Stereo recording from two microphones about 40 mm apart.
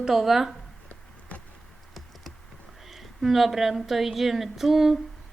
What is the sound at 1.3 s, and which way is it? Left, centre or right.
Insect, left.